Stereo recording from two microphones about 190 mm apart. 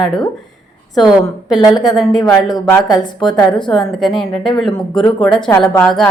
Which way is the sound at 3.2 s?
25° left (ahead or behind).